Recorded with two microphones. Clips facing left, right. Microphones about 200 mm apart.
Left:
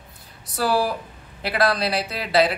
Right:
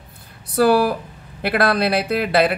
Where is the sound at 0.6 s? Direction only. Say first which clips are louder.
Right 7 dB; 60° right (ahead or behind).